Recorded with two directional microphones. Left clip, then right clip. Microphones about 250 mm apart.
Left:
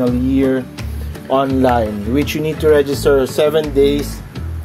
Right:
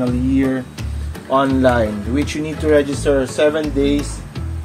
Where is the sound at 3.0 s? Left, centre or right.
Left.